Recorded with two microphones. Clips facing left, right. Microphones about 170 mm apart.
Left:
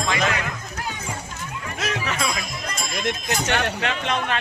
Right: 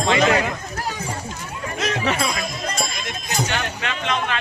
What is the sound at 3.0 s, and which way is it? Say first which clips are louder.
Speech: left 2 dB; 60° left (ahead or behind).